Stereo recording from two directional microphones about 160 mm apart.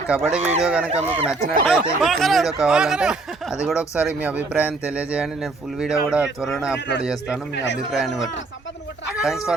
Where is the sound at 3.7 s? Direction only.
20° left (ahead or behind).